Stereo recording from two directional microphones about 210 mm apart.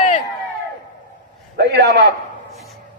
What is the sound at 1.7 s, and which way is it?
Speech, 55° right (ahead or behind).